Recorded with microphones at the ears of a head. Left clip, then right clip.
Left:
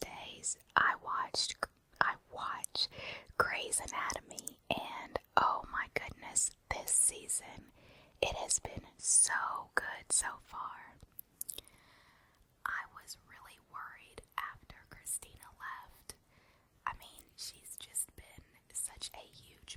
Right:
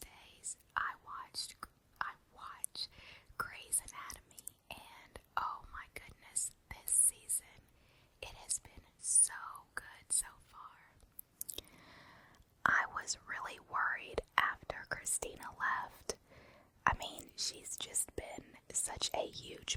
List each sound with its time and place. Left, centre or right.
0.0 s whispering: left
12.6 s whispering: right